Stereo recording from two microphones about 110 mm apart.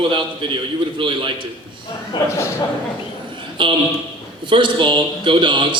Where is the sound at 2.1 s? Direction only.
45° left (ahead or behind).